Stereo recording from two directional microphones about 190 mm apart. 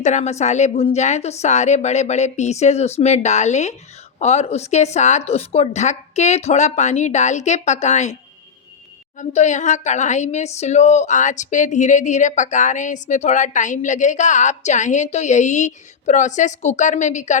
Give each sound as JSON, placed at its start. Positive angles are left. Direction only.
{"t": 0.0, "sound": "speech", "side_deg": 40}
{"t": 9.1, "sound": "speech", "side_deg": 40}